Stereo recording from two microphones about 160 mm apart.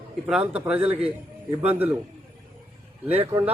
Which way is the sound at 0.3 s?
5° right (ahead or behind).